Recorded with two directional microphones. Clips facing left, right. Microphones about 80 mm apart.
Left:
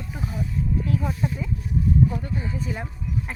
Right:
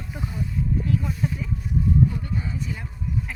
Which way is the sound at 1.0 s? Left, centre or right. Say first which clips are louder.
Left 1 dB; left.